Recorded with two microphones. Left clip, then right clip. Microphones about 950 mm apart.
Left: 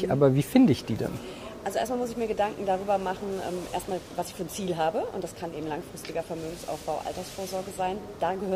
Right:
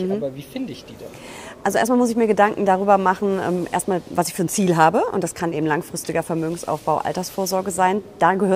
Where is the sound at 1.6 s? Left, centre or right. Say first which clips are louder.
Right 11 dB; right.